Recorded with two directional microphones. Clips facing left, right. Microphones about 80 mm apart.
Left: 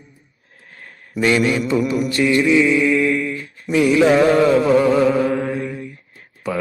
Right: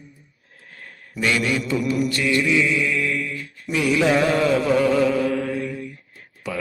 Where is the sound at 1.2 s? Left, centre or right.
Left.